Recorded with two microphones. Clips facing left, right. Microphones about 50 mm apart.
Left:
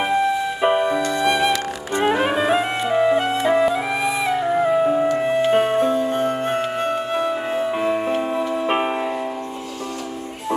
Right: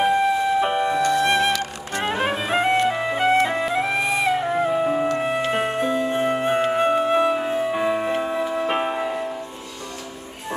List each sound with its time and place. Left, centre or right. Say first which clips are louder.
0.0 s music: right 1 dB; centre
0.6 s music: left 2 dB; centre
6.1 s music: even; centre
7.3 s music: even; centre
8.6 s music: left 2 dB; centre